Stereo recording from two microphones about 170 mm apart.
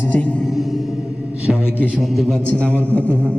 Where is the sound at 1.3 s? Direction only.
5° right (ahead or behind).